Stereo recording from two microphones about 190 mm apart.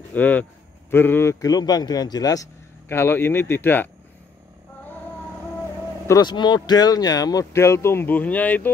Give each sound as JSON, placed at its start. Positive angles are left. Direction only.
{"t": 0.1, "sound": "speech", "side_deg": 10}
{"t": 6.0, "sound": "speech", "side_deg": 20}